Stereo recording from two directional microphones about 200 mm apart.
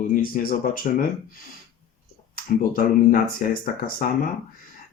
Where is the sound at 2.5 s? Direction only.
45° left (ahead or behind).